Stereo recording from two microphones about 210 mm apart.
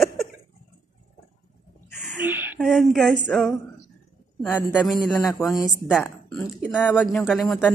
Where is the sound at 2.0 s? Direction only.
5° right (ahead or behind).